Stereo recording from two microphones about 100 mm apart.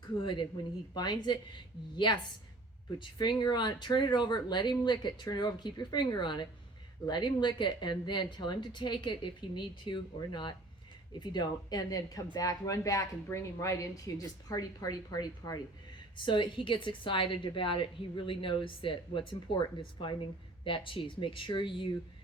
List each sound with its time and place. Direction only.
0.2 s speech: 55° left (ahead or behind)
0.9 s a woman's voice: 45° left (ahead or behind)